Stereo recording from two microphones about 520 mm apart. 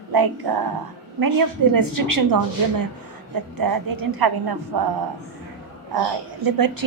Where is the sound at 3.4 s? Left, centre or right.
Right.